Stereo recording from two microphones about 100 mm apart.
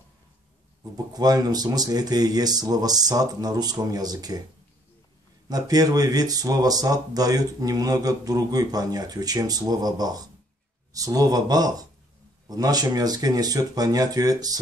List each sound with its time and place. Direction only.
0.9 s speech: 40° right (ahead or behind)
5.5 s speech: 40° right (ahead or behind)